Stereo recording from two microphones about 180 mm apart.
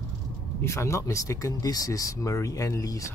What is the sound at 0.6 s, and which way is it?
Speech, 15° left (ahead or behind).